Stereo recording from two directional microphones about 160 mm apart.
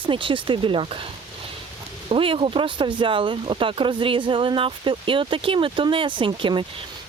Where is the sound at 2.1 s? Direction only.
35° right (ahead or behind).